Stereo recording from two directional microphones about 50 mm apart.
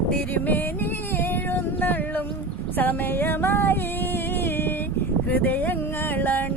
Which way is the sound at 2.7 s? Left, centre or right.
Left.